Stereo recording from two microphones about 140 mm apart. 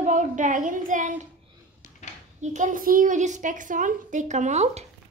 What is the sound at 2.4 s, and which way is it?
A woman's voice, 60° right (ahead or behind).